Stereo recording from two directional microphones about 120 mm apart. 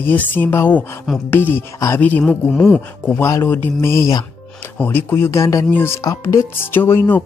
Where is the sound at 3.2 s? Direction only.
20° left (ahead or behind).